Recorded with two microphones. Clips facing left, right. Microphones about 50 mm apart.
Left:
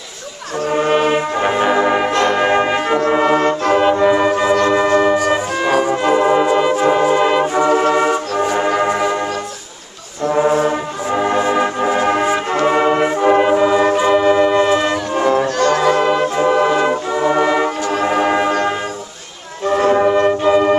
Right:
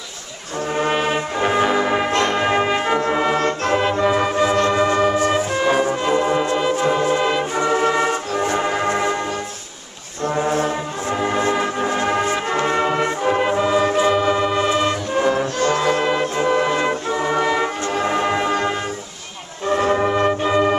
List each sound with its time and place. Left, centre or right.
0.7 s brass instrument: centre
3.1 s music: centre
11.1 s music: centre
12.6 s brass instrument: centre
13.9 s music: centre
15.4 s music: left
16.0 s music: centre
18.0 s bell: centre
19.9 s music: centre